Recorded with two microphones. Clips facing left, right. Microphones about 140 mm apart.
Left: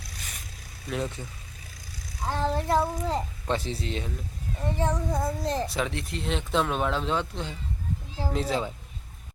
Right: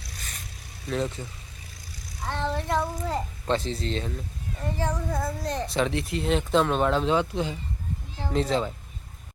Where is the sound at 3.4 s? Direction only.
10° left (ahead or behind).